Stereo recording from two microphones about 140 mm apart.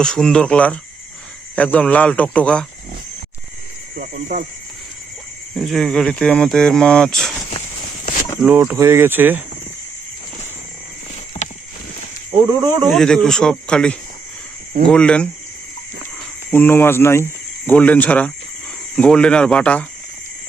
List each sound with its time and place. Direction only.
0.0 s speech: 5° left (ahead or behind)
3.9 s speech: 65° right (ahead or behind)
5.5 s speech: centre (ahead or behind)
8.4 s speech: 15° right (ahead or behind)
12.5 s speech: 30° right (ahead or behind)
12.9 s speech: 5° left (ahead or behind)
16.5 s speech: 15° left (ahead or behind)